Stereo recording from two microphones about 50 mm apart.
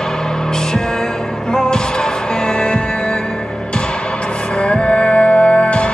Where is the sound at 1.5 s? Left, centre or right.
Centre.